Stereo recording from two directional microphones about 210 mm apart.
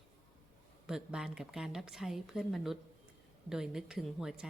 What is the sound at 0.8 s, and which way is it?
A woman's voice, 5° right (ahead or behind).